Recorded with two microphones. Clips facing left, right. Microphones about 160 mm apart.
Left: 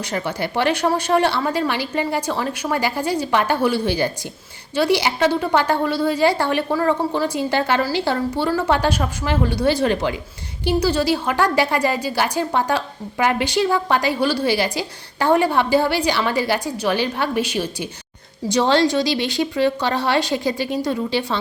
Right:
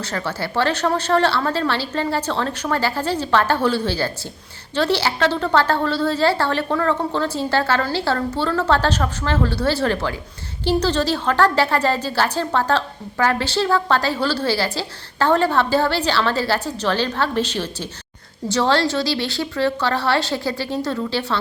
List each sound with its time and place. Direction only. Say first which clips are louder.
0.0 s a woman's voice: left 2 dB; 15° left (ahead or behind)